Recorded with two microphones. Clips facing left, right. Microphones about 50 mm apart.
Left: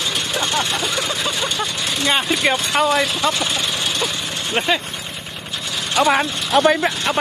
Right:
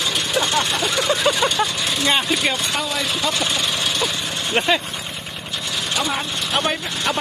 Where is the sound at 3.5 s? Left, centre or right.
Centre.